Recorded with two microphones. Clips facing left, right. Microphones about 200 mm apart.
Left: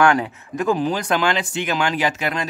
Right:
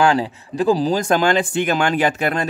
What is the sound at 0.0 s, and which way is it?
Speech, 30° right (ahead or behind).